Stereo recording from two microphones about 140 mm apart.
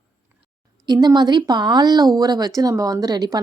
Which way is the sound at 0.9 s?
30° right (ahead or behind).